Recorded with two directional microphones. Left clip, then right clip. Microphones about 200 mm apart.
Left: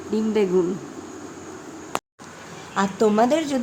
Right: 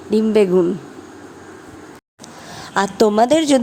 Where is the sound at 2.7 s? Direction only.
45° right (ahead or behind).